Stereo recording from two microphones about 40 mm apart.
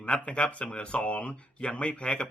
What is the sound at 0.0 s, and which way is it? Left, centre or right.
Speech, left.